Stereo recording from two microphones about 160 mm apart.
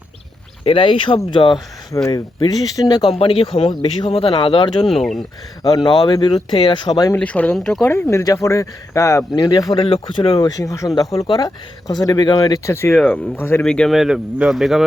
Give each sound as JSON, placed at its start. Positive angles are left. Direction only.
{"t": 0.6, "sound": "speech", "side_deg": 35}
{"t": 3.1, "sound": "speech", "side_deg": 35}
{"t": 7.2, "sound": "speech", "side_deg": 10}
{"t": 7.9, "sound": "speech", "side_deg": 15}
{"t": 9.7, "sound": "speech", "side_deg": 35}
{"t": 10.3, "sound": "speech", "side_deg": 20}
{"t": 12.9, "sound": "speech", "side_deg": 5}